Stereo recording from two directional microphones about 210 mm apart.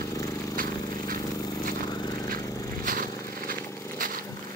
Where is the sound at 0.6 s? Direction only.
40° right (ahead or behind).